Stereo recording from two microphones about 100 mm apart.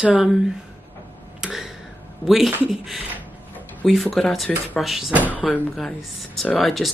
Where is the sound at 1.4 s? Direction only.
5° right (ahead or behind).